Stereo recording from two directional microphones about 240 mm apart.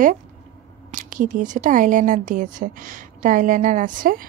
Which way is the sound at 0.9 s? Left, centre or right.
Right.